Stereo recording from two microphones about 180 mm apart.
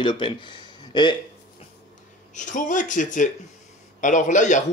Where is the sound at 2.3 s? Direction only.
45° left (ahead or behind).